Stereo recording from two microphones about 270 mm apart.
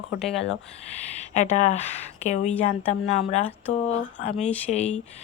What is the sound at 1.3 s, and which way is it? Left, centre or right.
Speech, left.